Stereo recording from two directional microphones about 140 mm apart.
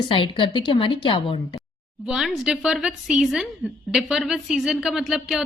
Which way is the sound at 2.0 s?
5° right (ahead or behind).